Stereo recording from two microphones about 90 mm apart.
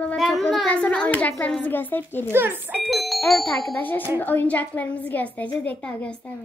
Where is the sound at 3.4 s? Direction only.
20° left (ahead or behind).